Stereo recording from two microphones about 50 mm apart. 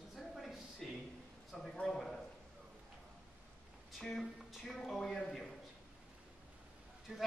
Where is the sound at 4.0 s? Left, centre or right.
Centre.